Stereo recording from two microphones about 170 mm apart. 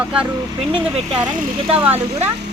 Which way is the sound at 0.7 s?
35° right (ahead or behind).